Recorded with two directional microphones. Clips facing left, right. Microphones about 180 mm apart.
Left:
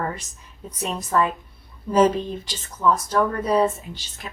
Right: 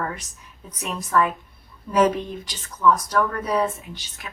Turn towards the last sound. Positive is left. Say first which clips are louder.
# left 2 dB
turn(degrees=30)  # may be behind; listen again after turning